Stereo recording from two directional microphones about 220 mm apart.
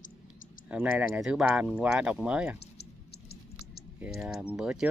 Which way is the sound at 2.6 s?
45° left (ahead or behind).